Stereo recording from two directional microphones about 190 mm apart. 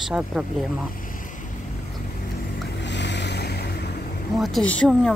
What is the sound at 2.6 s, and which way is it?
Boat, 70° left (ahead or behind).